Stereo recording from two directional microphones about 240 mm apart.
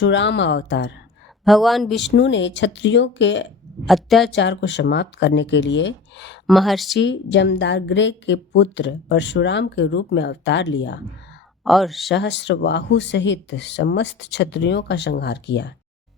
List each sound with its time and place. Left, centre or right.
0.0 s a woman's voice: left
1.5 s speech: centre
2.0 s a woman's voice: left
3.8 s speech: centre
4.3 s a woman's voice: left
6.5 s speech: centre
6.9 s a woman's voice: left
11.6 s speech: centre
12.1 s a woman's voice: left